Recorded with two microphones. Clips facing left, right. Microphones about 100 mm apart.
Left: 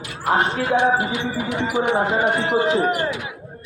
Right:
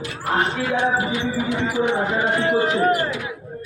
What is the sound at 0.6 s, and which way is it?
A man's voice, 20° left (ahead or behind).